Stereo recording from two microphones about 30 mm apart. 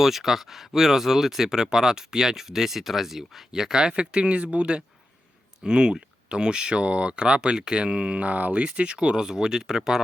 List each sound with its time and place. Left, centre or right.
0.0 s speech: centre
3.8 s speech: right
5.6 s speech: right
8.2 s speech: right
8.6 s speech: right; by 10.0 s centre